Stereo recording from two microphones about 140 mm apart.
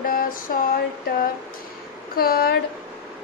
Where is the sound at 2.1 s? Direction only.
90° left.